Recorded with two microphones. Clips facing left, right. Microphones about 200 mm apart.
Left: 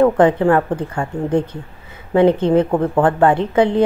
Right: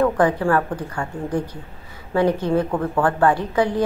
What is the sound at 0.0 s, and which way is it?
A woman's voice, 20° left (ahead or behind).